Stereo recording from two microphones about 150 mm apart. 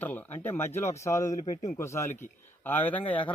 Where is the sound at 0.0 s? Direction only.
10° left (ahead or behind).